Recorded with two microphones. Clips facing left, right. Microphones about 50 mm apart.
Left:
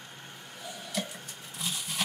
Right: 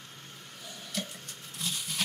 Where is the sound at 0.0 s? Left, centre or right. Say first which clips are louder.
Left 2 dB; centre.